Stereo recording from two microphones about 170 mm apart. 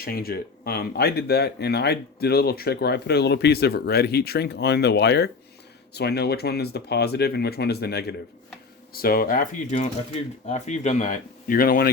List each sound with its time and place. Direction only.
0.0 s speech: 60° left (ahead or behind)
8.9 s speech: 60° left (ahead or behind)